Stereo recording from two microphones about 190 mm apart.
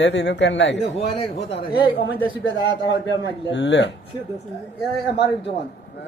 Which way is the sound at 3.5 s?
70° left (ahead or behind).